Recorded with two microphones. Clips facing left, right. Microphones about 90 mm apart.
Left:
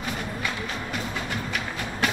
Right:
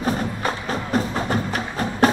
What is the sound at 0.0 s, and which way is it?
Music, 40° right (ahead or behind).